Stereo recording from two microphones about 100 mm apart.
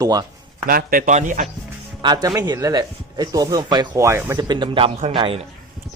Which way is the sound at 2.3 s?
35° right (ahead or behind).